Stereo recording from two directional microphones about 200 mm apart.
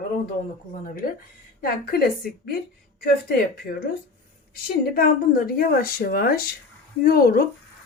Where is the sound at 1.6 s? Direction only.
50° left (ahead or behind).